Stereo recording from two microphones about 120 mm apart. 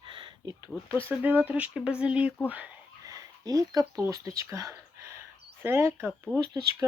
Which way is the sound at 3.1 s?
30° right (ahead or behind).